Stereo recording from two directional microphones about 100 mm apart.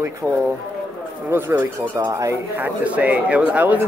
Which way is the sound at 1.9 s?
35° right (ahead or behind).